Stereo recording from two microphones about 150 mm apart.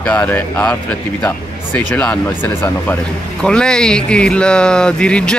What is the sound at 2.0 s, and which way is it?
Speech, 10° left (ahead or behind).